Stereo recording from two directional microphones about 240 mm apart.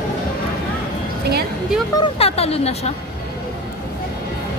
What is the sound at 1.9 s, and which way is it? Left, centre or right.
Speech, left.